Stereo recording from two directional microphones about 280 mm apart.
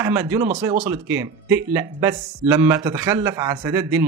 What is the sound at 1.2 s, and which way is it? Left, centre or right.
A man's voice, centre.